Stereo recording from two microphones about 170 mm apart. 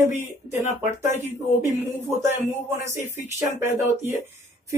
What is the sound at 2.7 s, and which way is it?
Speech, 15° right (ahead or behind).